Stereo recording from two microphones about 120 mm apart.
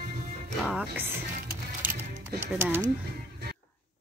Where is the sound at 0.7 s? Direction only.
15° right (ahead or behind).